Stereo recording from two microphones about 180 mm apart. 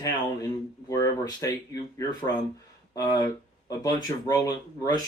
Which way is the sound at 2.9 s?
20° left (ahead or behind).